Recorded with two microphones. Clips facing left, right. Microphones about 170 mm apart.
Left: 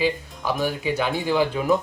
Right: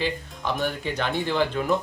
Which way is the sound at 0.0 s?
5° left (ahead or behind).